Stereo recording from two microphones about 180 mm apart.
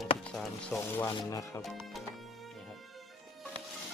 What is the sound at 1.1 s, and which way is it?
Speech, 20° left (ahead or behind).